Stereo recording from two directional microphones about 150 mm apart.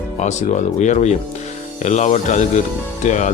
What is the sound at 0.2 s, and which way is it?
Speech, 50° left (ahead or behind).